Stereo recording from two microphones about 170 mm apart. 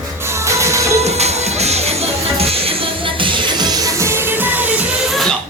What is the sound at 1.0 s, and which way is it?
Music, 40° right (ahead or behind).